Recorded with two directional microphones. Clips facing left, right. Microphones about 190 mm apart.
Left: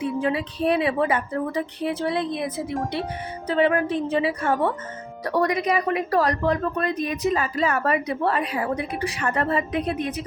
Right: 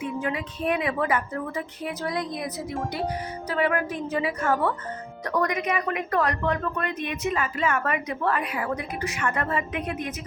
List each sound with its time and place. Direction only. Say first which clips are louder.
0.0 s a woman's voice: left 5 dB; 30° left (ahead or behind)